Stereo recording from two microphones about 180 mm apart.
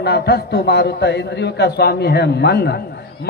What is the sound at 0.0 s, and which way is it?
A man's voice, 65° left (ahead or behind).